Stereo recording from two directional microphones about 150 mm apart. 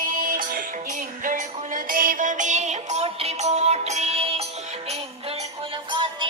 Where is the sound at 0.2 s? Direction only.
65° right (ahead or behind); by 4.4 s 45° right (ahead or behind).